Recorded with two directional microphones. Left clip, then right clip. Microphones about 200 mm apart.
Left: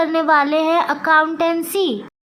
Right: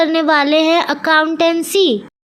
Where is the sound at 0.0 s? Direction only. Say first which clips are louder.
Right 2 dB; 20° right (ahead or behind).